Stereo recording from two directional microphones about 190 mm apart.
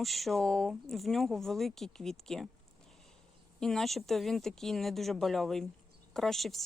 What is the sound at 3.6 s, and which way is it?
Speech, centre (ahead or behind).